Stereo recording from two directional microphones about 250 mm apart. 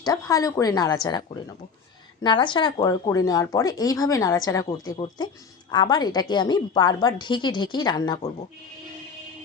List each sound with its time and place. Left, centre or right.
0.0 s speech: centre
2.2 s speech: centre